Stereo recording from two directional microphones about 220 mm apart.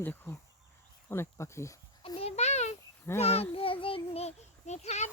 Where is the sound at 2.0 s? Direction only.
25° left (ahead or behind).